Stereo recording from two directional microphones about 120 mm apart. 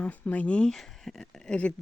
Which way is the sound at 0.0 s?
15° left (ahead or behind).